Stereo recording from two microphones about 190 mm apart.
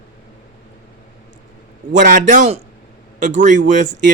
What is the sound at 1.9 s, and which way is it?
A man's voice, 40° right (ahead or behind).